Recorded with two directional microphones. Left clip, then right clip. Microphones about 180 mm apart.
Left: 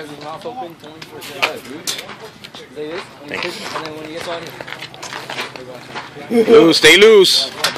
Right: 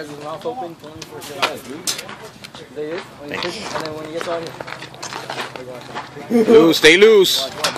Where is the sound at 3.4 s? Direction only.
15° right (ahead or behind).